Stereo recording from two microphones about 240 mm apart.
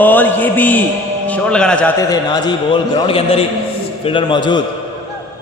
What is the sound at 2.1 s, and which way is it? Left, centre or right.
A man's voice, centre.